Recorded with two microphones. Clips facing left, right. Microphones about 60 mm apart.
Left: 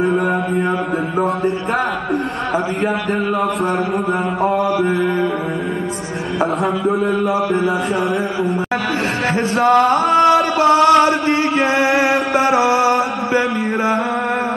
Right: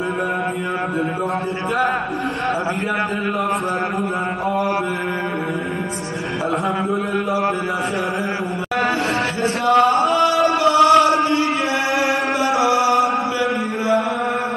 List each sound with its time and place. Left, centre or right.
9.6 s a sound: left
11.0 s chant: left
11.9 s music: left